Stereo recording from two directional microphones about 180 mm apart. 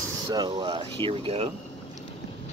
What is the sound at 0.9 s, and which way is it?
Speech, 30° right (ahead or behind).